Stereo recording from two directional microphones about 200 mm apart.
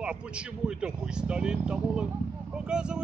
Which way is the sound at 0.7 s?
5° right (ahead or behind).